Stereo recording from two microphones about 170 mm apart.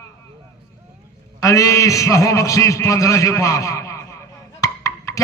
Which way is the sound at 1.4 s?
20° left (ahead or behind).